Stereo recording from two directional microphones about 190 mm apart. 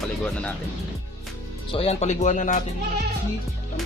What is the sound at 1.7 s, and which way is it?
Speech, 30° left (ahead or behind).